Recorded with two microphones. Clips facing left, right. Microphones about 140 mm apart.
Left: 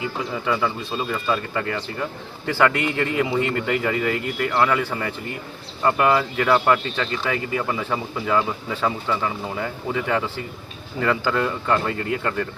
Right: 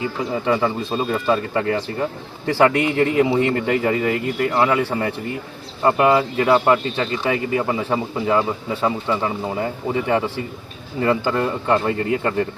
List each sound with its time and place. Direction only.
0.4 s speech: 35° right (ahead or behind)